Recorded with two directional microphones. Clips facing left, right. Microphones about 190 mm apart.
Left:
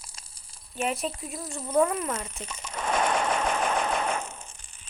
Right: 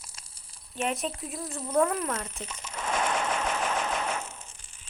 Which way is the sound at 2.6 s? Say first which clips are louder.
Left 3 dB; 50° left (ahead or behind).